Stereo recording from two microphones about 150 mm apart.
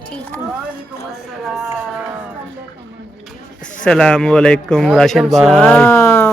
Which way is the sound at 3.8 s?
5° left (ahead or behind).